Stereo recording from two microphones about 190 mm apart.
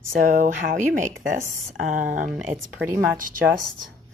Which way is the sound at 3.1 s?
45° right (ahead or behind).